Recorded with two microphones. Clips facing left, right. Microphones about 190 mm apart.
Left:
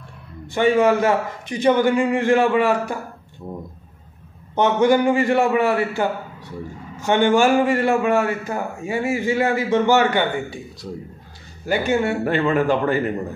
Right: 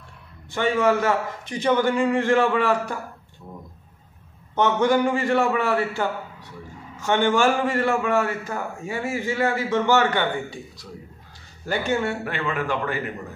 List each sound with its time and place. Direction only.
0.6 s a man's voice: 15° left (ahead or behind)
4.6 s a man's voice: 15° left (ahead or behind)
11.6 s a man's voice: 10° left (ahead or behind)
12.3 s a man's voice: 35° left (ahead or behind)